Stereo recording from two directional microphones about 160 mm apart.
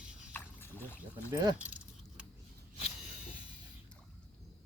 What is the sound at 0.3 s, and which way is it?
Pour, 15° left (ahead or behind).